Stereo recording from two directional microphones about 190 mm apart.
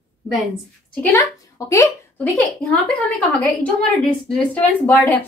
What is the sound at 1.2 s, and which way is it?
A woman's voice, 15° left (ahead or behind).